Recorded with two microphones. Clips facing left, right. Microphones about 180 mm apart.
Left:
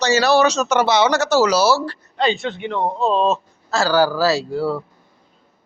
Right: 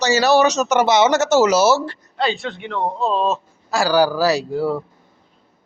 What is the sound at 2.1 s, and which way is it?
Speech, 5° right (ahead or behind).